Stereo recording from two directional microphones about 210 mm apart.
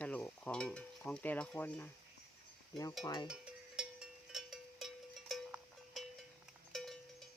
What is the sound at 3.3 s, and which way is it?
Cowbell, 5° right (ahead or behind).